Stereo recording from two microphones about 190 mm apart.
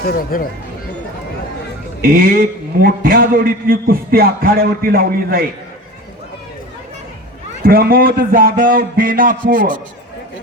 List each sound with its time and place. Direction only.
0.0 s speech: 50° left (ahead or behind)
2.0 s a man's voice: 50° right (ahead or behind)
7.6 s a man's voice: 50° right (ahead or behind)